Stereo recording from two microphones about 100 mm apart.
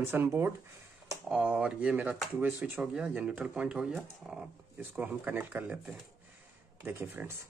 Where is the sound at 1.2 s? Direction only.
10° right (ahead or behind).